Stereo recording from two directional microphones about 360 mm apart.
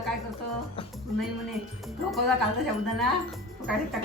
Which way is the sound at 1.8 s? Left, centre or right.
Centre.